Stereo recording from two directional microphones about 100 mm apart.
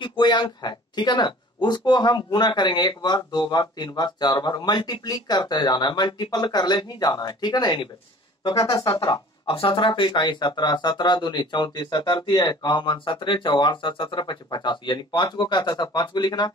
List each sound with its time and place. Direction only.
0.0 s speech: 50° left (ahead or behind)
9.5 s speech: 60° left (ahead or behind)